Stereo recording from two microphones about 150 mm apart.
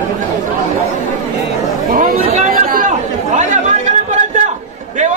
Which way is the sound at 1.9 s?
65° right (ahead or behind).